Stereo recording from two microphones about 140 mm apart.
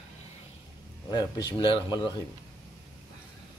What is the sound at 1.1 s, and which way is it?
Speech, 30° left (ahead or behind).